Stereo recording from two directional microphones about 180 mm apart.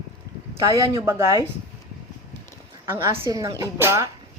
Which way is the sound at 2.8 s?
15° right (ahead or behind).